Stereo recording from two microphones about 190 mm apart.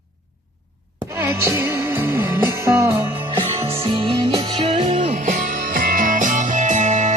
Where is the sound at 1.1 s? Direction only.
15° right (ahead or behind).